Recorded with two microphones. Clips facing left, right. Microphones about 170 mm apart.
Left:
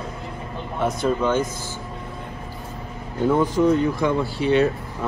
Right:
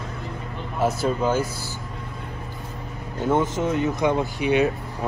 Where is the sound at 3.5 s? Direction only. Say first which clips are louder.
Left 5 dB; 20° right (ahead or behind).